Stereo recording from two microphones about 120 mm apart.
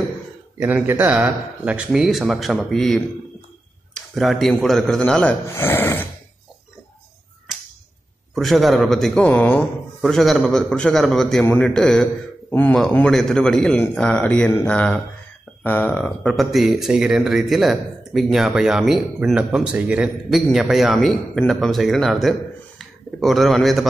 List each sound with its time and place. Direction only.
0.6 s a man's voice: 15° right (ahead or behind); by 3.0 s 5° left (ahead or behind)
4.1 s speech: centre (ahead or behind)
5.5 s speech: 20° left (ahead or behind)
8.4 s speech: centre (ahead or behind)
12.4 s speech: 15° left (ahead or behind)
12.9 s speech: 5° left (ahead or behind)